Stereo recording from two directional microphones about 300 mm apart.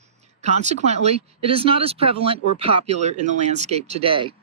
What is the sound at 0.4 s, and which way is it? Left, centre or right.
Speech, right.